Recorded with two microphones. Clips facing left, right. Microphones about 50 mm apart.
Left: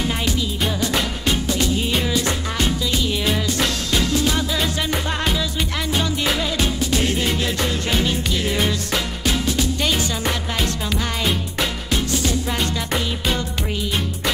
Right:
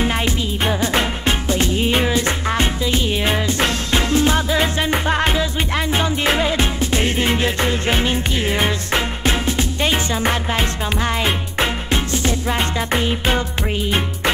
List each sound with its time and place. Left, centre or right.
0.0 s music: right